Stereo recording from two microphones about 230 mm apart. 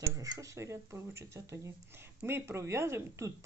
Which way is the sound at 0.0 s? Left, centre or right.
Centre.